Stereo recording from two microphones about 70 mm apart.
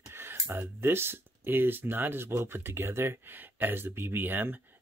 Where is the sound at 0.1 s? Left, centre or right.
Right.